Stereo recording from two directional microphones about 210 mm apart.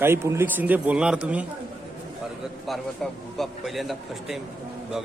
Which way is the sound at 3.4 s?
Centre (ahead or behind).